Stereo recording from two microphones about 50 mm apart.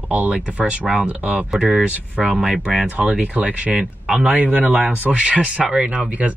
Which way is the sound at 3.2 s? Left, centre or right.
Right.